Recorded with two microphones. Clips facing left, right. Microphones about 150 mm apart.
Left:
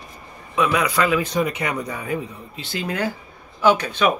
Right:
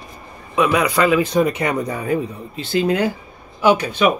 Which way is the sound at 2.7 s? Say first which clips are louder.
Right 8 dB; 25° right (ahead or behind).